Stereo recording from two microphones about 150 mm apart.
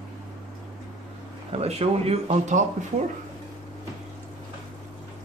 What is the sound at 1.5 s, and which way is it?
Speech, 45° right (ahead or behind).